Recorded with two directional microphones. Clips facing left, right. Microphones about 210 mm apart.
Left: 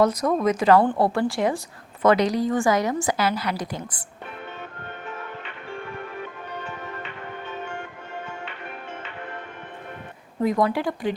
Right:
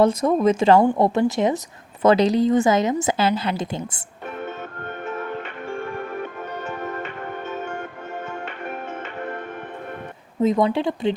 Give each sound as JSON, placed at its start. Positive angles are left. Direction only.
{"t": 0.0, "sound": "a woman's voice", "side_deg": -25}
{"t": 5.7, "sound": "music", "side_deg": -50}
{"t": 10.4, "sound": "a woman's voice", "side_deg": -25}